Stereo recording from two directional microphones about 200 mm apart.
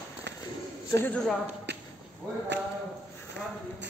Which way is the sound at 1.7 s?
60° right (ahead or behind).